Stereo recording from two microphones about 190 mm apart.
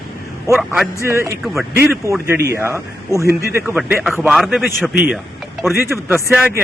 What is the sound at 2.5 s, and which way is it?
A man's voice, 15° right (ahead or behind).